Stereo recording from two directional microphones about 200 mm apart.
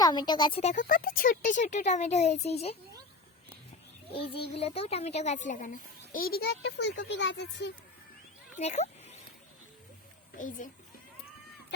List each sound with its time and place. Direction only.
0.0 s speech: 20° left (ahead or behind)
0.6 s speech: 40° left (ahead or behind)
4.1 s a child's voice: 30° left (ahead or behind); by 7.7 s 60° left (ahead or behind)
8.5 s a sound: 35° left (ahead or behind)
10.3 s speech: 40° left (ahead or behind)